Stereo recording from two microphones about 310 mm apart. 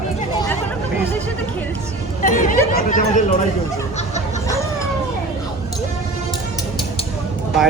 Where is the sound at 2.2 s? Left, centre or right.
Left.